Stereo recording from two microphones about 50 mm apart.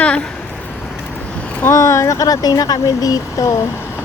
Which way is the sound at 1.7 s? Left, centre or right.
Left.